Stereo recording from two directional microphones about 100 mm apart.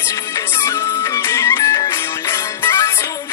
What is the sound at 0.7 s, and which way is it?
Music, 30° left (ahead or behind).